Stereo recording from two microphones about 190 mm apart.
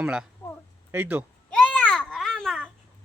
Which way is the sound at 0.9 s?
10° right (ahead or behind).